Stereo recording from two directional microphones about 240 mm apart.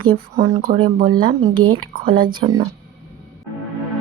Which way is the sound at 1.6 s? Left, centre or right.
Right.